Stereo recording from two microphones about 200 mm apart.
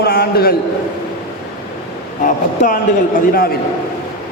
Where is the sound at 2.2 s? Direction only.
40° left (ahead or behind).